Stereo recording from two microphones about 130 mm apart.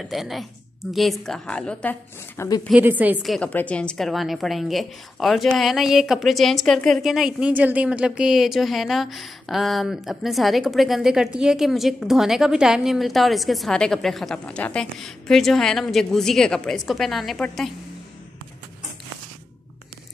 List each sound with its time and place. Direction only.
0.0 s a woman's voice: centre (ahead or behind)
2.3 s speech: 25° left (ahead or behind)
2.7 s a woman's voice: 10° right (ahead or behind)
3.2 s a woman's voice: 5° left (ahead or behind)